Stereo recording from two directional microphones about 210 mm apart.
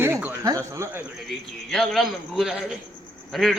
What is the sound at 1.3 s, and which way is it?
A man's voice, centre (ahead or behind).